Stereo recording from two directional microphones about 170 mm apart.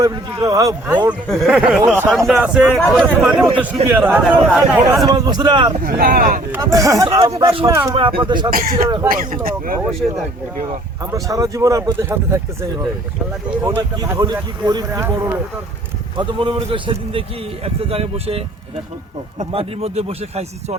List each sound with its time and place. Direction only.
0.0 s speech: 20° right (ahead or behind)
1.3 s speech: 5° right (ahead or behind)
5.0 s speech: 25° right (ahead or behind)
5.8 s speech: 60° right (ahead or behind)
6.5 s speech: 20° right (ahead or behind)
7.9 s speech: 30° right (ahead or behind)
8.5 s speech: 55° right (ahead or behind)
10.0 s speech: 5° right (ahead or behind)
11.0 s speech: 20° right (ahead or behind)
13.6 s speech: 10° right (ahead or behind)
14.0 s speech: 25° right (ahead or behind)
16.1 s a man's voice: 30° right (ahead or behind)